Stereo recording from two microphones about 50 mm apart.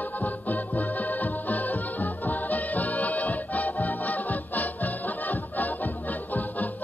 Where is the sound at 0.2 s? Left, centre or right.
Left.